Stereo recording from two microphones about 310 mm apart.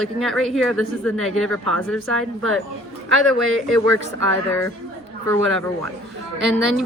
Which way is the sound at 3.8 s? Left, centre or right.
Right.